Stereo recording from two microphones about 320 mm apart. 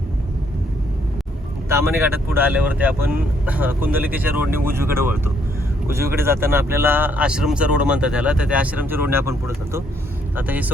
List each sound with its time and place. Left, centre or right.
1.7 s speech: centre
10.3 s speech: centre